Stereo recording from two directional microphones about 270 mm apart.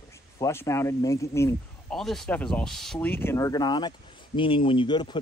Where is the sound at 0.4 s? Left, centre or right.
Centre.